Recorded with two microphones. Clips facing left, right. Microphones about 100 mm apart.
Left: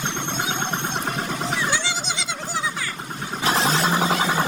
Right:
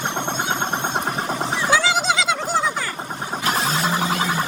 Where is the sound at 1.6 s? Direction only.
90° right.